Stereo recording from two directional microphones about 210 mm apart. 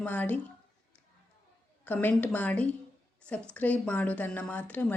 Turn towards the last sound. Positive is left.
turn(degrees=10)  # may be behind; listen again after turning